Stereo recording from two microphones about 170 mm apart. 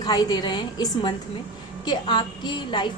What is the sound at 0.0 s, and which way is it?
A woman's voice, 25° left (ahead or behind).